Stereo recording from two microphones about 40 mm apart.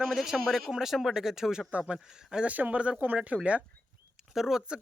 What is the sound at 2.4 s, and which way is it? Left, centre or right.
Speech, right.